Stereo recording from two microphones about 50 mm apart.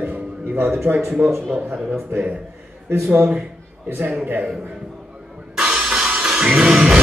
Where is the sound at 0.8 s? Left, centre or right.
Right.